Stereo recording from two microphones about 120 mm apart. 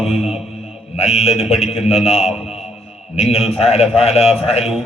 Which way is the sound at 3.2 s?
60° left (ahead or behind).